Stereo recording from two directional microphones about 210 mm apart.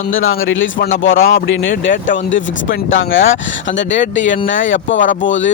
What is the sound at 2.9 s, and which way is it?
A man's voice, 70° left (ahead or behind).